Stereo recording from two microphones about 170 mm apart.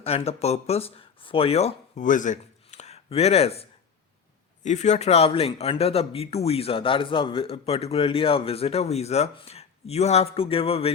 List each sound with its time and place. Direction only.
0.0 s speech: 35° left (ahead or behind)